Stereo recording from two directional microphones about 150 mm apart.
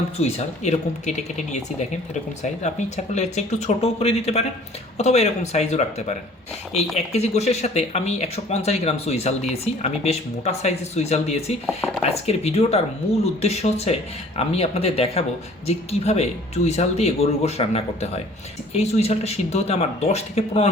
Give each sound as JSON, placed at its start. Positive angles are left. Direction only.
{"t": 0.2, "sound": "speech", "side_deg": 45}
{"t": 2.4, "sound": "speech", "side_deg": 50}